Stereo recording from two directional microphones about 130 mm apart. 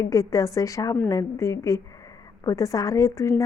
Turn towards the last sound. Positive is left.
turn(degrees=25)  # may be behind; listen again after turning